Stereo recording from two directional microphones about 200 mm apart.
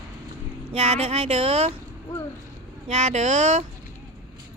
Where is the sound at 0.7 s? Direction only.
30° right (ahead or behind).